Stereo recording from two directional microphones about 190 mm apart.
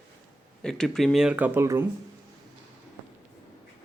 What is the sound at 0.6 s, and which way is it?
Speech, 5° left (ahead or behind).